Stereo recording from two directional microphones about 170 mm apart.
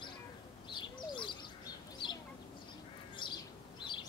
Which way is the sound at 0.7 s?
25° left (ahead or behind).